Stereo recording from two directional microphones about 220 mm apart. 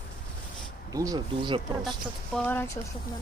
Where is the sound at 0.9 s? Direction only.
15° right (ahead or behind).